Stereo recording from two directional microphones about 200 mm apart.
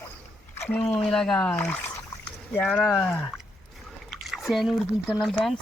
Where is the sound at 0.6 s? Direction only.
10° left (ahead or behind).